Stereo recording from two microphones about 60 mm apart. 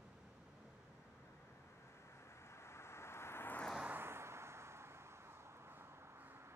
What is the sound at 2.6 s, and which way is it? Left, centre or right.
Vehicle, left.